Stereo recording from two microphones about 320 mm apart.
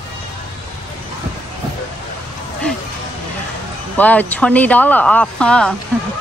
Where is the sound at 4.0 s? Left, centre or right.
Centre.